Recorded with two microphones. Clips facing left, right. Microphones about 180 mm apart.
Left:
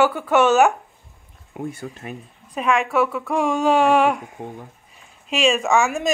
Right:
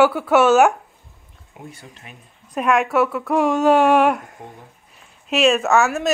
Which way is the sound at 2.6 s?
5° right (ahead or behind).